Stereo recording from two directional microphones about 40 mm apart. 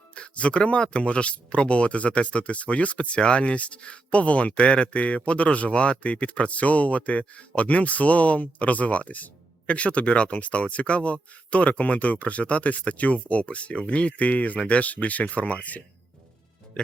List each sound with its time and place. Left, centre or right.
0.1 s speech: left